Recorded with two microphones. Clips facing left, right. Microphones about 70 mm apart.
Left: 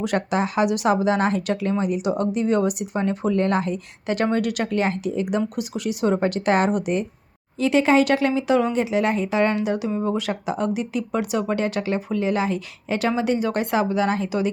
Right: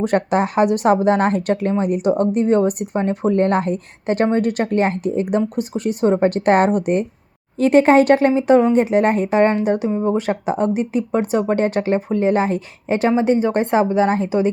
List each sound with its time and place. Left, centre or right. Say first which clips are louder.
0.0 s speech: right 5 dB; right
9.9 s speech: right 5 dB; right
10.2 s speech: right 5 dB; right